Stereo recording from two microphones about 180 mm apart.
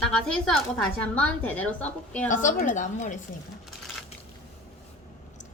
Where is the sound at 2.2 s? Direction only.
45° left (ahead or behind).